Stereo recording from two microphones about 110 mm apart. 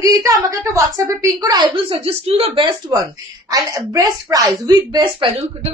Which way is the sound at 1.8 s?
55° right (ahead or behind).